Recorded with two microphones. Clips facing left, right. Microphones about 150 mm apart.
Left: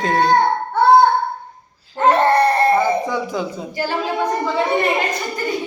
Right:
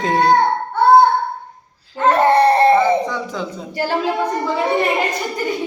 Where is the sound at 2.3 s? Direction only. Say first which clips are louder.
Right 3 dB; 25° right (ahead or behind).